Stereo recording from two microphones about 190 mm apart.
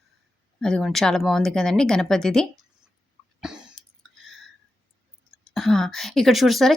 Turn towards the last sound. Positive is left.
turn(degrees=0)  # may be behind; listen again after turning